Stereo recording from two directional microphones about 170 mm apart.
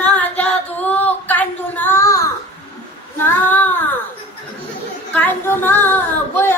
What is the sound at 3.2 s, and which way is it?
Child singing, 10° left (ahead or behind).